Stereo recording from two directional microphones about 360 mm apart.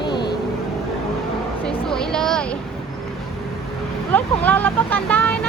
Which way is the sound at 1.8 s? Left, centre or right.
Centre.